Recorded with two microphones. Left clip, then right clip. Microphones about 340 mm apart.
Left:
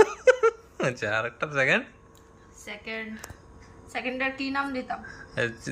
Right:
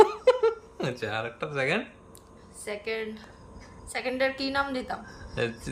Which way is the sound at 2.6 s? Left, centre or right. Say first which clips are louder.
Right 3 dB; centre.